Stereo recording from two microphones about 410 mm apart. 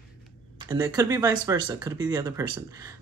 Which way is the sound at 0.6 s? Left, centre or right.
Centre.